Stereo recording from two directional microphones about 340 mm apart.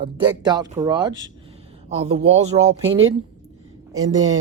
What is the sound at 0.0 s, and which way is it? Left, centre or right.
Speech, centre.